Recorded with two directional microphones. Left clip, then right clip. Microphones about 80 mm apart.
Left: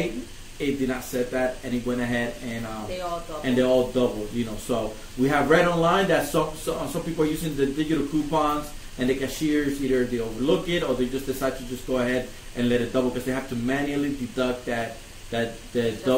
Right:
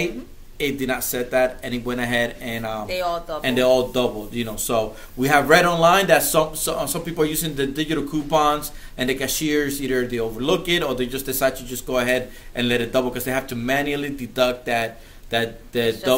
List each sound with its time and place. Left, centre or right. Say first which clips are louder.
0.6 s speech: right 3 dB; right
3.4 s a man's voice: right 3 dB; centre